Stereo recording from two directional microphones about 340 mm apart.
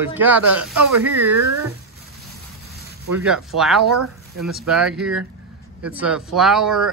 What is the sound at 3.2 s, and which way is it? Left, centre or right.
Speech, centre.